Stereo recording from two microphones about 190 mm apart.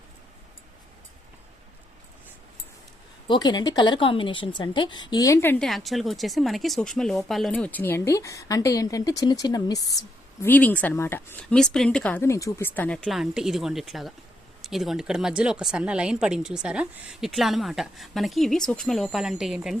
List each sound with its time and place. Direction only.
3.2 s a woman's voice: 20° left (ahead or behind)
10.4 s a woman's voice: 10° left (ahead or behind)